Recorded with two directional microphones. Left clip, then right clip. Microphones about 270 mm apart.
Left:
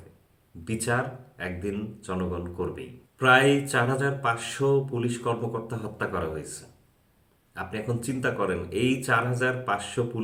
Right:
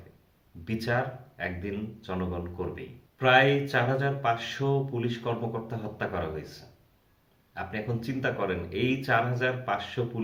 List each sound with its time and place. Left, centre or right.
0.6 s speech: centre
7.5 s speech: centre